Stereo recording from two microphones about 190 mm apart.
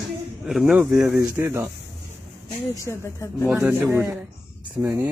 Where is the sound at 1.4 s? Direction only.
15° right (ahead or behind).